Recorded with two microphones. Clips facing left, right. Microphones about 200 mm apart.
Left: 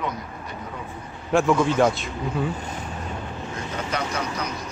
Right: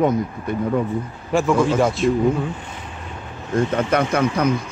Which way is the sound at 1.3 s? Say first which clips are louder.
Right 1 dB; centre (ahead or behind).